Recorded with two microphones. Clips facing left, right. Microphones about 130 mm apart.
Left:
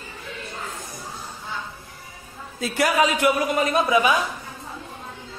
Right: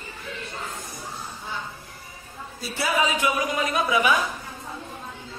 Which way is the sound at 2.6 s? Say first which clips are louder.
Left 4 dB; 90° left.